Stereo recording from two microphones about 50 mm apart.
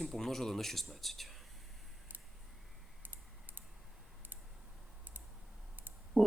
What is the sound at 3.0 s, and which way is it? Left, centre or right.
Typing, right.